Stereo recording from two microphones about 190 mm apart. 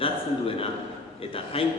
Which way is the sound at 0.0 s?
30° left (ahead or behind).